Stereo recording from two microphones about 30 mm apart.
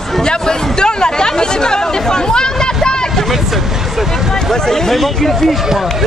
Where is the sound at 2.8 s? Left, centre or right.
Left.